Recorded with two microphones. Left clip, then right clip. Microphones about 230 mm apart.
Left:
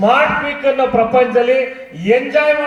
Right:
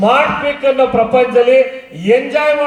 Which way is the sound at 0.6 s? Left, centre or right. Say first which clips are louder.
Right 2 dB; right.